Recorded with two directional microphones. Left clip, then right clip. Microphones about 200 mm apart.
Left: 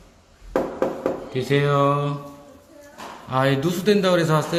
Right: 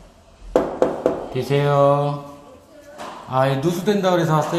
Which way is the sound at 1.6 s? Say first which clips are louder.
Right 5 dB; 25° left (ahead or behind).